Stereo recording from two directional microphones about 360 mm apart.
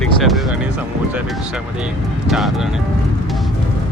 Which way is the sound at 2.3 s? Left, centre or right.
Centre.